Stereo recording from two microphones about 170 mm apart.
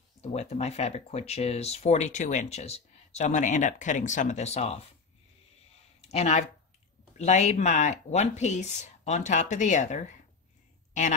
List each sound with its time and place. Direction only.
0.2 s speech: 40° left (ahead or behind)
5.9 s speech: 40° left (ahead or behind)
10.9 s a sound: 45° left (ahead or behind)